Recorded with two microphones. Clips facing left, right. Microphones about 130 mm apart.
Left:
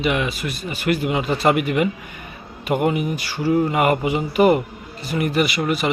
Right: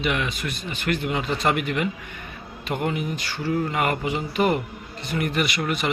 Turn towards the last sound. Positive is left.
turn(degrees=5)  # may be behind; listen again after turning